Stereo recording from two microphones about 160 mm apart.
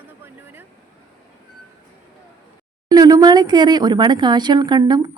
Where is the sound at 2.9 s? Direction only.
25° right (ahead or behind).